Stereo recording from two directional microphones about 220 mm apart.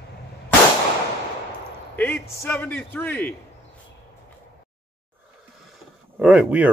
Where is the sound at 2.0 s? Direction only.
5° left (ahead or behind).